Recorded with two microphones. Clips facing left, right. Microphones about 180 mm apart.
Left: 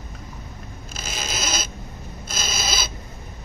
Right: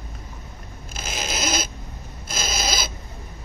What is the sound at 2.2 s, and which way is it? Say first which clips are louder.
Owl: right 2 dB; 50° right (ahead or behind).